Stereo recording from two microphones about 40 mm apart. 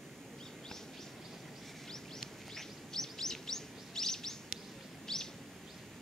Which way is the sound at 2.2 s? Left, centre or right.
Centre.